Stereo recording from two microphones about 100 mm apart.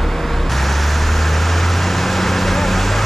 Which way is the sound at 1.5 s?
Centre (ahead or behind).